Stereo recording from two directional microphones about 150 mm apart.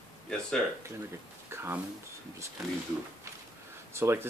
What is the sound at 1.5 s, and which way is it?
Speech, 15° right (ahead or behind).